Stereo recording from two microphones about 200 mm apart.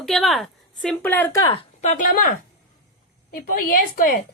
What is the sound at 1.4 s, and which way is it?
Speech, 30° left (ahead or behind).